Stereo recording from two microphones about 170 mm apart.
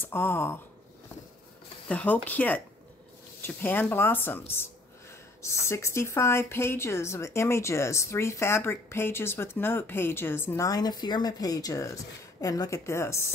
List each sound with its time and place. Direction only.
0.0 s speech: 15° left (ahead or behind)
1.9 s speech: 10° left (ahead or behind)